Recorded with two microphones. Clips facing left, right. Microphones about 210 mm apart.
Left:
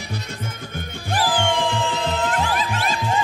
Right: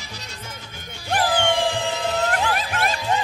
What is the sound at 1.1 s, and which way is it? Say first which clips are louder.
Music: right 1 dB; 60° right (ahead or behind).